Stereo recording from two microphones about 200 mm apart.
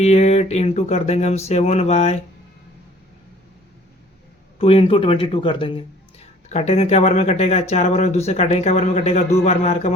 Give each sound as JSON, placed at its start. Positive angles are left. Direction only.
{"t": 0.0, "sound": "speech", "side_deg": 30}
{"t": 4.5, "sound": "speech", "side_deg": 30}